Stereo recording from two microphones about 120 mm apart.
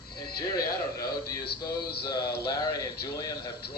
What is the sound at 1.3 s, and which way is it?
Speech, 35° left (ahead or behind).